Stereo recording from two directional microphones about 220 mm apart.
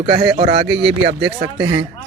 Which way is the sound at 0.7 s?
50° right (ahead or behind).